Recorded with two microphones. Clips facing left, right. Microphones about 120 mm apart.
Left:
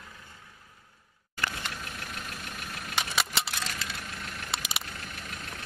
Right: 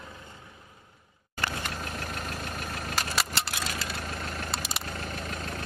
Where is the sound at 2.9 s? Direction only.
Centre (ahead or behind).